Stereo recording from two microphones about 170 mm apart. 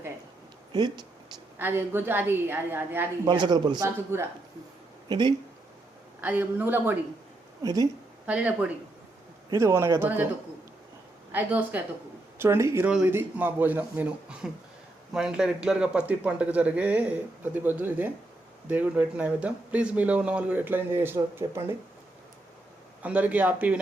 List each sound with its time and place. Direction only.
0.7 s speech: 25° right (ahead or behind)
1.5 s speech: 10° right (ahead or behind)
3.2 s speech: 25° right (ahead or behind)
3.8 s speech: 15° right (ahead or behind)
5.0 s speech: 25° right (ahead or behind)
6.2 s speech: 10° right (ahead or behind)
7.6 s speech: 20° right (ahead or behind)
8.3 s speech: 10° right (ahead or behind)
11.3 s speech: 10° right (ahead or behind)
23.0 s speech: 10° right (ahead or behind)